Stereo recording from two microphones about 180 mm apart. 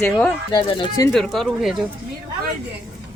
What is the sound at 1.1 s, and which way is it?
Speech, centre (ahead or behind).